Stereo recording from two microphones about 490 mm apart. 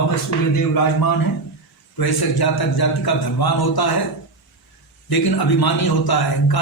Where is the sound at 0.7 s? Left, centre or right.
Left.